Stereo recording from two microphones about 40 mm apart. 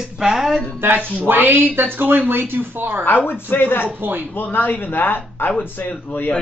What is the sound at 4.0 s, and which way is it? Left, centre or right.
Speech, right.